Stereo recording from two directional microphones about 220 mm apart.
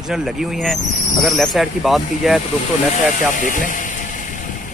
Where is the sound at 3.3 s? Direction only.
35° left (ahead or behind).